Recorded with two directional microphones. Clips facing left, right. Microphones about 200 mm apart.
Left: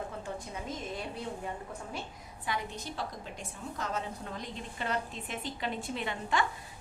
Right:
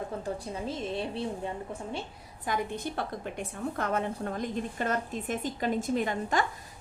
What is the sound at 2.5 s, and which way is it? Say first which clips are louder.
A woman's voice: right 5 dB; 55° right (ahead or behind).